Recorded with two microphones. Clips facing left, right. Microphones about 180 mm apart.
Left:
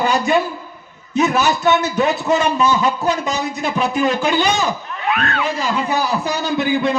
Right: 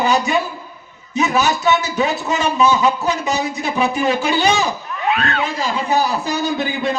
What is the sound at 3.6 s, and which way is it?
A man's voice, 50° left (ahead or behind).